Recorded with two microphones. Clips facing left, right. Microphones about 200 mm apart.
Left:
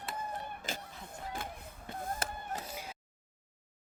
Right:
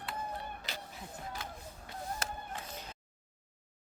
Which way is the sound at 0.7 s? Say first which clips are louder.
Left 7 dB; 45° left (ahead or behind).